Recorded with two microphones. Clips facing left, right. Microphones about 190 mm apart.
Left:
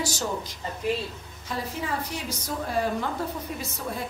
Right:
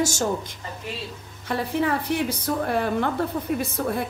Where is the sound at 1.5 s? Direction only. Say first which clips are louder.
Right 7 dB; 60° right (ahead or behind).